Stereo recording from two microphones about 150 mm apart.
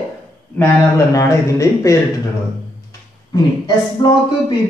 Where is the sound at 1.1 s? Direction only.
20° left (ahead or behind).